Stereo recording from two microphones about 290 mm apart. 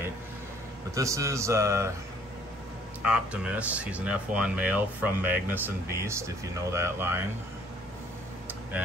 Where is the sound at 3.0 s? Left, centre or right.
Centre.